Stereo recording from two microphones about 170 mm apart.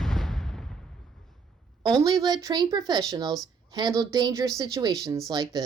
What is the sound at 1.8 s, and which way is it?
Speech, 20° right (ahead or behind).